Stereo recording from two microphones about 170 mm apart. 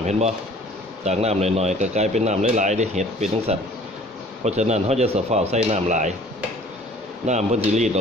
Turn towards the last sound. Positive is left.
turn(degrees=-40)  # may be behind; listen again after turning